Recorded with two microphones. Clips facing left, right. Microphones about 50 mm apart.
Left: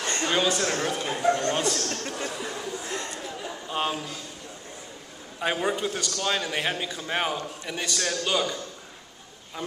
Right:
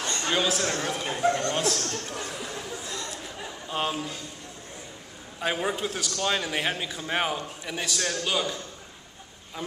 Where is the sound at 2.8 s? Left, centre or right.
Left.